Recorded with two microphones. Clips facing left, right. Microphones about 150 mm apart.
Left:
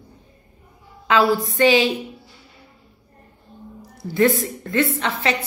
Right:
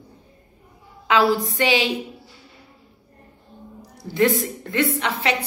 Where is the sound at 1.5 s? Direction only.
15° right (ahead or behind).